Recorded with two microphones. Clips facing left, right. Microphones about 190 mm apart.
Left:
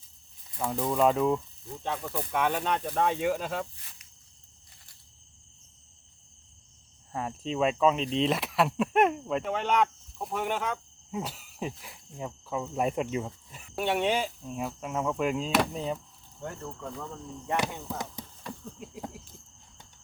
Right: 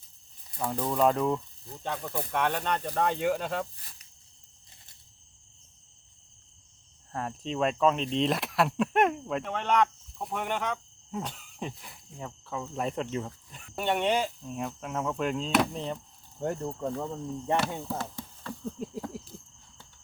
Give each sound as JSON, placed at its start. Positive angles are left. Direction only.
{"t": 0.7, "sound": "speech", "side_deg": 5}
{"t": 7.1, "sound": "speech", "side_deg": 5}
{"t": 16.6, "sound": "speech", "side_deg": -30}
{"t": 17.6, "sound": "chop", "side_deg": 15}
{"t": 18.8, "sound": "a sound", "side_deg": -40}